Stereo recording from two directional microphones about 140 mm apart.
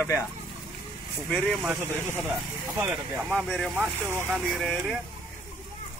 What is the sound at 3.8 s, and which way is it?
Speech, 15° right (ahead or behind).